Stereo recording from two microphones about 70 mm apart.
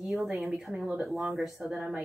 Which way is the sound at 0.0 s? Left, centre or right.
Centre.